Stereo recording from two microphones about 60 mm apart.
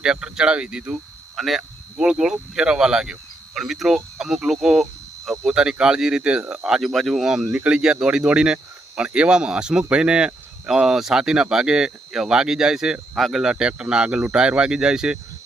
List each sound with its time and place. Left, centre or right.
0.0 s speech: centre
1.4 s speech: centre
2.0 s speech: centre
7.5 s speech: right
7.8 s speech: centre
13.4 s speech: centre